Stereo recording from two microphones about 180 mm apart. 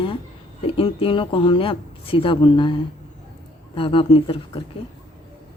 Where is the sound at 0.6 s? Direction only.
30° left (ahead or behind).